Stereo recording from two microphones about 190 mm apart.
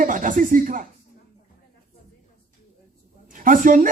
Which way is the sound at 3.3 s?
45° right (ahead or behind).